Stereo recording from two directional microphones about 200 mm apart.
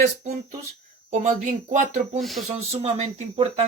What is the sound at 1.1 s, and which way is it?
Speech, 40° right (ahead or behind).